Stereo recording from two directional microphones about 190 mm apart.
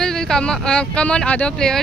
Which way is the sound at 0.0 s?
5° left (ahead or behind).